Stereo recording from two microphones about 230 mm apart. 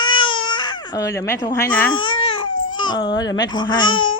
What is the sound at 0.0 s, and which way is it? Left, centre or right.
Baby cry, left.